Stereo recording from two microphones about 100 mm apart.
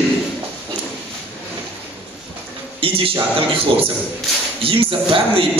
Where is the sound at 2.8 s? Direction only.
65° right (ahead or behind).